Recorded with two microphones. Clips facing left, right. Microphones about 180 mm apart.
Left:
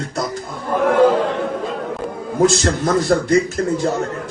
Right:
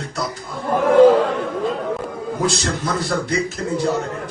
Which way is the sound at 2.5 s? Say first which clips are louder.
Left 5 dB; 50° left (ahead or behind).